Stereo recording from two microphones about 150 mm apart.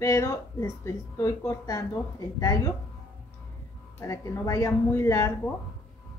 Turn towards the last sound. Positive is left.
turn(degrees=20)  # may be behind; listen again after turning